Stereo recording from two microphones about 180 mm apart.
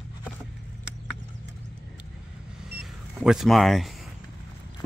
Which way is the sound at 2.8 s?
5° right (ahead or behind).